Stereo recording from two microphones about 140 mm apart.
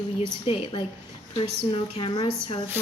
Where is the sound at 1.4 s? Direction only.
35° left (ahead or behind).